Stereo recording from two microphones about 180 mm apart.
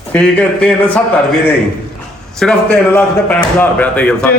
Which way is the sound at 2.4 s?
5° left (ahead or behind).